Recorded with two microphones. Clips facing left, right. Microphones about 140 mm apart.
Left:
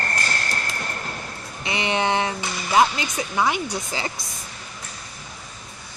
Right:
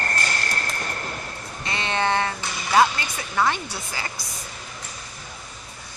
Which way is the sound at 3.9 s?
20° left (ahead or behind).